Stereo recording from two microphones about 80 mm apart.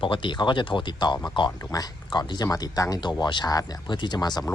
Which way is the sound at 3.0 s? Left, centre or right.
Left.